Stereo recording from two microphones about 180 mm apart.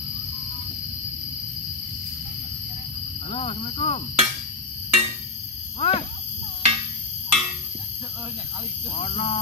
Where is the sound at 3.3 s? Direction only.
30° left (ahead or behind).